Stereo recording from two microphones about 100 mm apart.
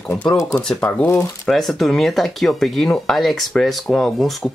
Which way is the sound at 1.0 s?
25° left (ahead or behind).